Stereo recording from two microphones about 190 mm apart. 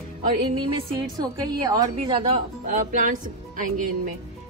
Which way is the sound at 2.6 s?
45° right (ahead or behind).